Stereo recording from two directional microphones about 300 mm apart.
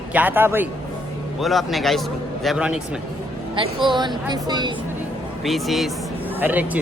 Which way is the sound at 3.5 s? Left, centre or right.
Centre.